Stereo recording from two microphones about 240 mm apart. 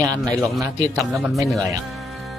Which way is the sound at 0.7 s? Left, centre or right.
Centre.